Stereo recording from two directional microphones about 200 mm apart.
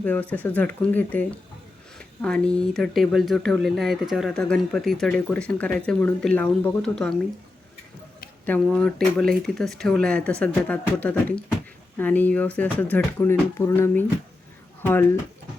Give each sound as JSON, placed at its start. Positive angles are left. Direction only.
{"t": 0.0, "sound": "speech", "side_deg": 10}
{"t": 8.6, "sound": "speech", "side_deg": 5}